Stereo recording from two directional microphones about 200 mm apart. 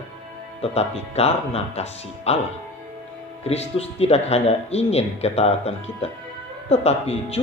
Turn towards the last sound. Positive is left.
turn(degrees=30)  # may be behind; listen again after turning